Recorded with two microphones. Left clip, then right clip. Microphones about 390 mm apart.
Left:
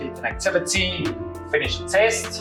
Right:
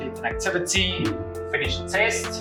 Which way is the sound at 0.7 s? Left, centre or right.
Centre.